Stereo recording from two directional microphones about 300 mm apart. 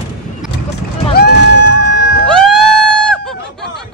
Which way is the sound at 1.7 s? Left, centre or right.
Right.